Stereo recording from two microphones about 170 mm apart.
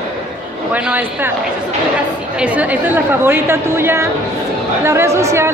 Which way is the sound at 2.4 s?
10° right (ahead or behind).